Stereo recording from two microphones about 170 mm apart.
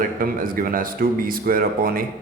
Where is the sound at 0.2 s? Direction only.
55° right (ahead or behind).